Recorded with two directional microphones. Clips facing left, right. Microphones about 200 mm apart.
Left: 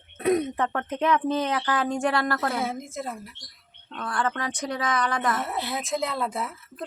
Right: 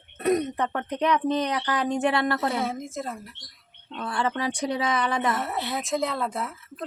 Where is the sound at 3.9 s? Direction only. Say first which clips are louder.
Right 1 dB; 10° right (ahead or behind).